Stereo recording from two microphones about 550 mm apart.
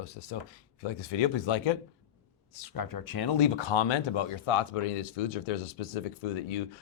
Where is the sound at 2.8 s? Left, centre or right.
Left.